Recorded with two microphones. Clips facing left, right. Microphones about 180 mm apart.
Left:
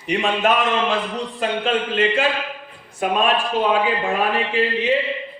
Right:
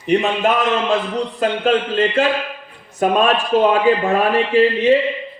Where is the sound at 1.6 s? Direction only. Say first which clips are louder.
Right 3 dB; 40° right (ahead or behind).